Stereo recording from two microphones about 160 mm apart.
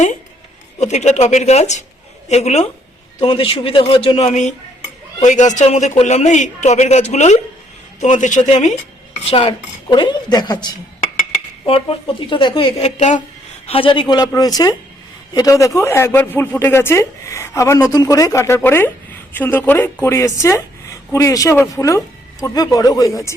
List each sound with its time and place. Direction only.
0.8 s a man's voice: 45° left (ahead or behind)
3.2 s a man's voice: 35° left (ahead or behind)
9.2 s speech: 35° left (ahead or behind)
12.3 s a man's voice: 30° left (ahead or behind)